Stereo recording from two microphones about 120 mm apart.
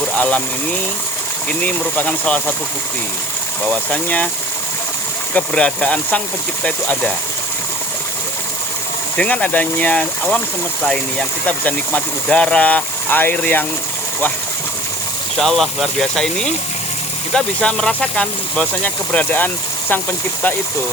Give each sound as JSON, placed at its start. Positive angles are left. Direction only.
{"t": 0.2, "sound": "speech", "side_deg": 10}
{"t": 3.7, "sound": "speech", "side_deg": 10}
{"t": 5.3, "sound": "speech", "side_deg": 10}
{"t": 9.1, "sound": "speech", "side_deg": 10}
{"t": 15.4, "sound": "speech", "side_deg": 0}